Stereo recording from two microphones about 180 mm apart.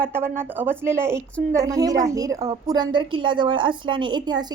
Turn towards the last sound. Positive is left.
turn(degrees=-25)  # may be behind; listen again after turning